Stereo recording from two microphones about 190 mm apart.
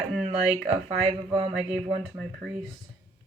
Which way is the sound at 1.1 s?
35° right (ahead or behind).